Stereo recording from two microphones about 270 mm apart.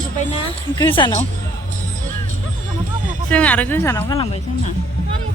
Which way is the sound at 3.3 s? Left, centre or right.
Centre.